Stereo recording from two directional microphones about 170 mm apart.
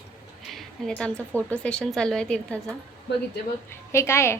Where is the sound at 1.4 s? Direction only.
10° left (ahead or behind).